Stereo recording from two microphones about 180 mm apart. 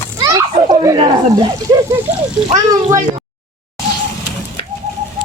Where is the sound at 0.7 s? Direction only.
20° right (ahead or behind).